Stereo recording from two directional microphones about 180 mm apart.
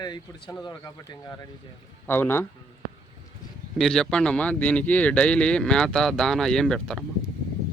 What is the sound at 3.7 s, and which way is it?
Speech, centre (ahead or behind).